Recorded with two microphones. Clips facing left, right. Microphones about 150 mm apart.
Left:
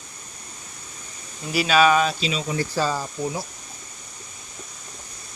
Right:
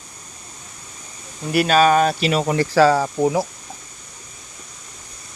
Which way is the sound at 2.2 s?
65° right (ahead or behind).